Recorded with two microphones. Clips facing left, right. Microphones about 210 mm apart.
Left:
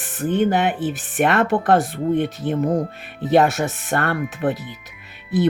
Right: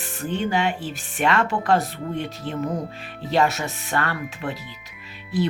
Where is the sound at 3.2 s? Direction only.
55° left (ahead or behind).